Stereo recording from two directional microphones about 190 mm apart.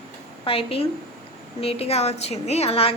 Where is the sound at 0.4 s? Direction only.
30° left (ahead or behind).